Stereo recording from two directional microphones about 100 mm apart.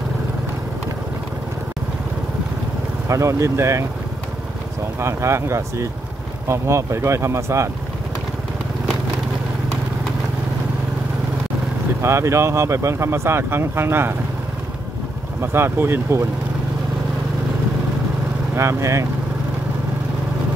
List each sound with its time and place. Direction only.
3.1 s speech: 30° right (ahead or behind)
5.0 s speech: 30° right (ahead or behind)
12.0 s speech: 25° right (ahead or behind)
15.4 s speech: 25° right (ahead or behind)
18.5 s speech: 25° right (ahead or behind)